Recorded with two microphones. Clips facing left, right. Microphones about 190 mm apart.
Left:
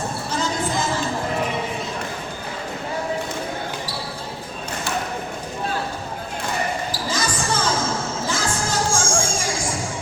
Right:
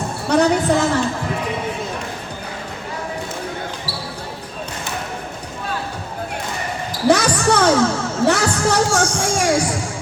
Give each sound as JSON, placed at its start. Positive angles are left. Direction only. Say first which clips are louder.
{"t": 0.3, "sound": "a sound", "louder": "right 11 dB", "side_deg": -65}
{"t": 7.1, "sound": "basketball bounce", "louder": "right 11 dB", "side_deg": -70}
{"t": 8.2, "sound": "music", "louder": "right 8 dB", "side_deg": -65}